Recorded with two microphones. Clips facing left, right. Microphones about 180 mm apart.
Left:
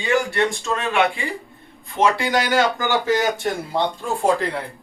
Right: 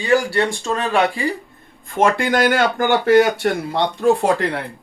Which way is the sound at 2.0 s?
50° right (ahead or behind).